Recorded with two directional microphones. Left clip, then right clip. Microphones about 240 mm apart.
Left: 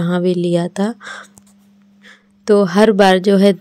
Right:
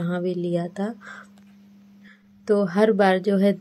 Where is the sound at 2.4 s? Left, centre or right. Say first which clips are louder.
Left 8 dB; left.